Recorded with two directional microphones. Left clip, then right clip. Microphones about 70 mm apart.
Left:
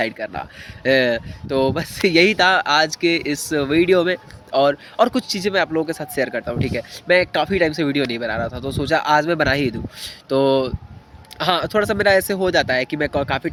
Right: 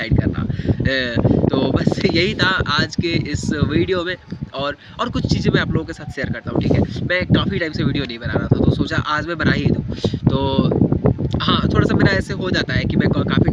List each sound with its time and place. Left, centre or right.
0.7 s speech: right